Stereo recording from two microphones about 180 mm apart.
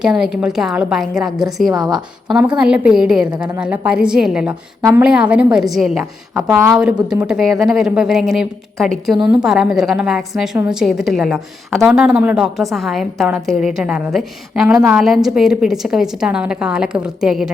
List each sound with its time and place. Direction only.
0.0 s a woman's voice: 5° right (ahead or behind)
4.8 s a woman's voice: 15° right (ahead or behind)
5.0 s a woman's voice: 5° right (ahead or behind)